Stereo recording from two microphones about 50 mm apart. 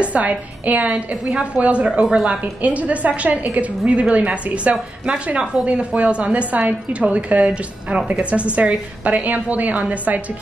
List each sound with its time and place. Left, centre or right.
0.0 s a woman's voice: right
1.9 s speech: centre
2.6 s a woman's voice: right